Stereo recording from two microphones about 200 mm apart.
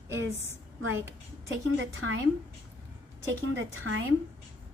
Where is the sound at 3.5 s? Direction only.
75° right (ahead or behind).